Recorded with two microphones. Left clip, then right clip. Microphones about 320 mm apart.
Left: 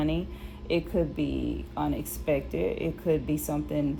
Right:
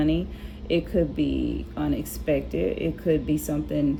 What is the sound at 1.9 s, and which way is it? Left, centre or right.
Speech, centre.